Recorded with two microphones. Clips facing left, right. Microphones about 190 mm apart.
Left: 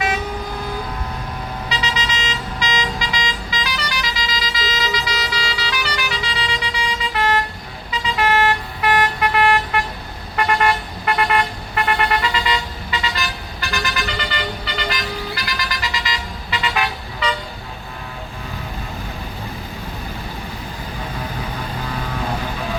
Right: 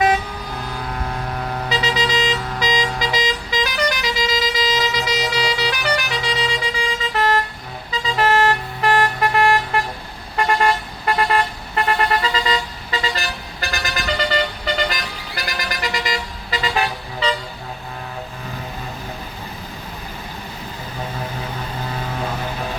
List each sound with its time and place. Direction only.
1.7 s vehicle: 50° right (ahead or behind)
7.1 s vehicle: 40° right (ahead or behind)
16.6 s vehicle: 35° right (ahead or behind)